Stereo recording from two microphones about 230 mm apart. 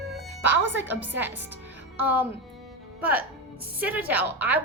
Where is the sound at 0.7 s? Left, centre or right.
Centre.